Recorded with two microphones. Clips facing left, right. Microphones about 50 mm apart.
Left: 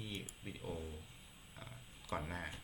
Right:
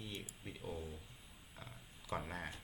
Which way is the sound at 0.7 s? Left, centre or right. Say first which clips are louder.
Even; left.